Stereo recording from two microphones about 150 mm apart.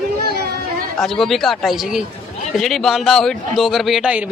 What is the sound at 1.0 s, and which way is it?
Speech, centre (ahead or behind).